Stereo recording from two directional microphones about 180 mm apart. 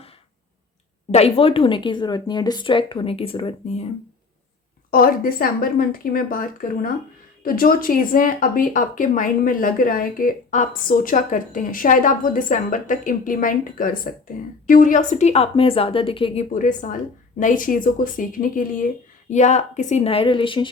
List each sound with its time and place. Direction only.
1.1 s speech: 35° left (ahead or behind)
4.9 s a woman's voice: 50° left (ahead or behind); by 16.5 s 30° left (ahead or behind)
16.5 s a woman's voice: 45° left (ahead or behind); by 20.7 s 30° left (ahead or behind)